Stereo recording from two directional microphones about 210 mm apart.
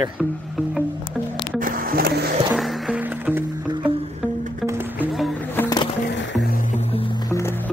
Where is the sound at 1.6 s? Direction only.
40° right (ahead or behind).